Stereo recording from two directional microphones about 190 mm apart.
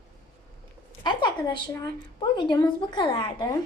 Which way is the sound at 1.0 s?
25° left (ahead or behind).